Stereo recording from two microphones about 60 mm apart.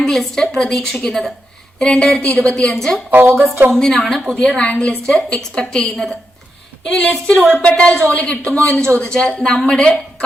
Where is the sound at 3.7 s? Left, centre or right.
Centre.